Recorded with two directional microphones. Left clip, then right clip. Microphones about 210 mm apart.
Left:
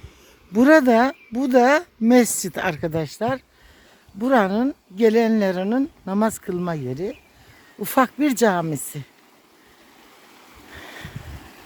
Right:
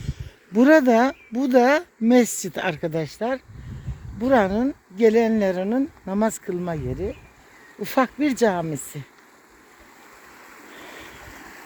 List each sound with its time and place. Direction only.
0.5 s speech: 10° left (ahead or behind)
10.7 s boat: 25° left (ahead or behind)